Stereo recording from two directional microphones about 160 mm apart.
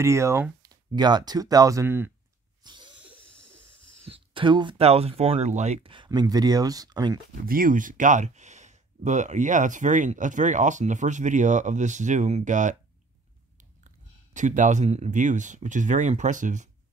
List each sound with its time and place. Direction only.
0.0 s speech: 15° right (ahead or behind)
2.6 s a sound: 30° right (ahead or behind)
4.1 s speech: 30° right (ahead or behind)
7.4 s speech: 60° right (ahead or behind)
13.8 s speech: 50° right (ahead or behind)